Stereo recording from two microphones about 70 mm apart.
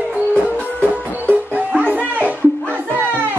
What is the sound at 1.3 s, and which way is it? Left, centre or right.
Music, right.